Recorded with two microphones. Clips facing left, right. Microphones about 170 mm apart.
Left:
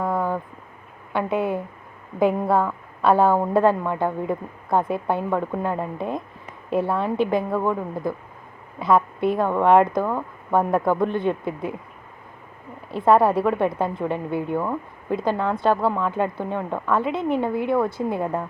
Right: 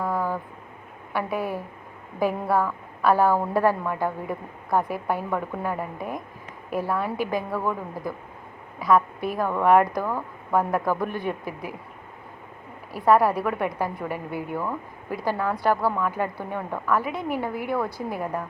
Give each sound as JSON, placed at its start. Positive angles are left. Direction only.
{"t": 0.0, "sound": "vehicle", "side_deg": 0}
{"t": 1.1, "sound": "a woman's voice", "side_deg": 20}
{"t": 12.9, "sound": "a woman's voice", "side_deg": 25}